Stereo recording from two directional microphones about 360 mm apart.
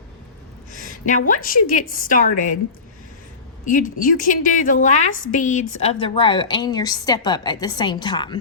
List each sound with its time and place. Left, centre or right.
0.7 s a sound: left
1.3 s a woman's voice: left
3.7 s a woman's voice: left